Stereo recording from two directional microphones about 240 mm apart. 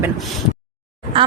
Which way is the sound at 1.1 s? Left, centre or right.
Right.